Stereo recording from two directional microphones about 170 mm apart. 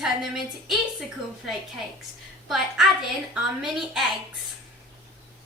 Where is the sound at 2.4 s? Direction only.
Centre (ahead or behind).